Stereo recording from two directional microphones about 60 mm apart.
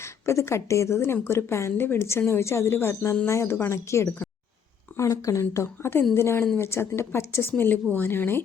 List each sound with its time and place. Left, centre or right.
0.0 s a woman's voice: left
4.9 s speech: left
7.5 s speech: left